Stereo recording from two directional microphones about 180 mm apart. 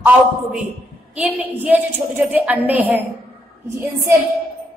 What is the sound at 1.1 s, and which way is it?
A woman's voice, 10° right (ahead or behind).